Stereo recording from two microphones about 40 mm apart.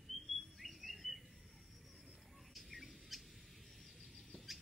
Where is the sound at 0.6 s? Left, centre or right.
Centre.